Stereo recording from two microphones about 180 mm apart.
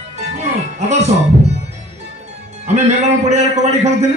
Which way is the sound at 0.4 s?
40° right (ahead or behind).